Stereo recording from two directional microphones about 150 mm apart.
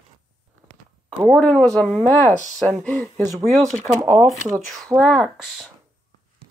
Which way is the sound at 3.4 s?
Centre (ahead or behind).